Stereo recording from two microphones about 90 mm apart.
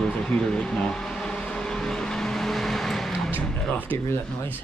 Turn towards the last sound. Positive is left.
turn(degrees=25)  # may be behind; listen again after turning